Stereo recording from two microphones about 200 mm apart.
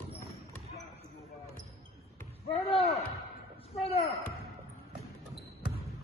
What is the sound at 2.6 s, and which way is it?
Speech, 30° left (ahead or behind).